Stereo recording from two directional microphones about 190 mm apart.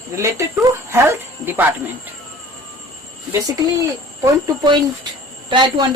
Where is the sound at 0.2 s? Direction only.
15° right (ahead or behind).